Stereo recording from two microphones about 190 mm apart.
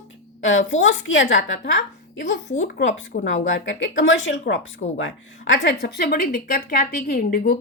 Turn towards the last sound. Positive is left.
turn(degrees=50)  # may be behind; listen again after turning